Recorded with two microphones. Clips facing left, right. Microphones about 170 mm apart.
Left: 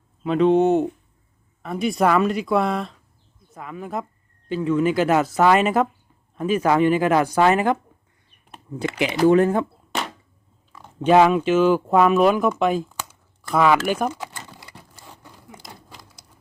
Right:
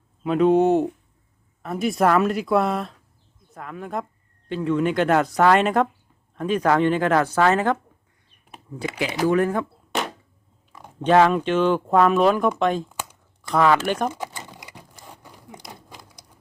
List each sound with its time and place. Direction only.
0.3 s speech: 5° right (ahead or behind); by 7.8 s 15° left (ahead or behind)
9.2 s speech: 25° left (ahead or behind)
11.0 s speech: 10° left (ahead or behind)
14.2 s a sound: 15° right (ahead or behind)